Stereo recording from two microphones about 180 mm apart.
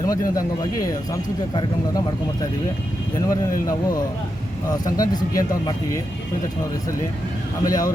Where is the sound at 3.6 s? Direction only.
20° left (ahead or behind).